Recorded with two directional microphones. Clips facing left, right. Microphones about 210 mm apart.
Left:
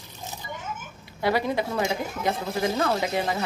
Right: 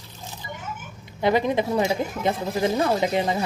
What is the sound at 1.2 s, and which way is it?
Speech, 20° right (ahead or behind).